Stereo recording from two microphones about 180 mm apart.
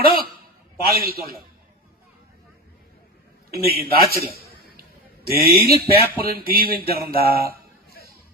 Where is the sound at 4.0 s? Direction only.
60° right (ahead or behind).